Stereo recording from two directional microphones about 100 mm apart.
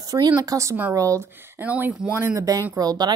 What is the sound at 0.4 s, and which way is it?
Speech, 35° right (ahead or behind).